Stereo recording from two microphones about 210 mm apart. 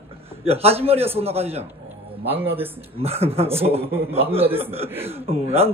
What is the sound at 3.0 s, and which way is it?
Speech, 30° right (ahead or behind).